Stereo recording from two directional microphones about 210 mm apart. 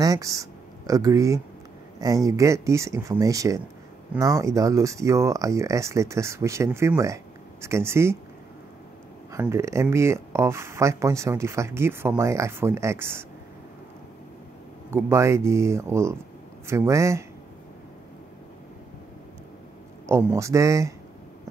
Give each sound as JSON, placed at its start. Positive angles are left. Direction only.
{"t": 0.0, "sound": "speech", "side_deg": -15}
{"t": 9.3, "sound": "speech", "side_deg": -15}
{"t": 14.9, "sound": "speech", "side_deg": -10}
{"t": 20.1, "sound": "speech", "side_deg": -15}